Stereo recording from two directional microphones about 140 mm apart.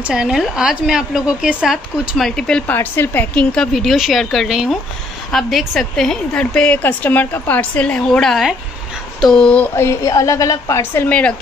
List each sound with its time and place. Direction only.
0.0 s a woman's voice: 5° right (ahead or behind)
9.8 s a woman's voice: 20° left (ahead or behind)